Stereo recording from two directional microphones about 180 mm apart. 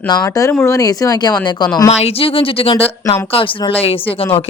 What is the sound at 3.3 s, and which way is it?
Speech, 30° left (ahead or behind).